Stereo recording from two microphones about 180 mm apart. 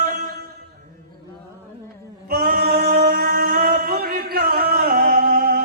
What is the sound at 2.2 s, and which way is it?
Male singing, 55° right (ahead or behind).